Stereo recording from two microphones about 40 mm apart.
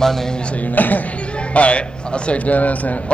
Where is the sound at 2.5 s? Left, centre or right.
Left.